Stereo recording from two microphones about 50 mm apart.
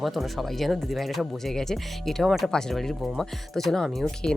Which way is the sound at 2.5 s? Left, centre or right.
Centre.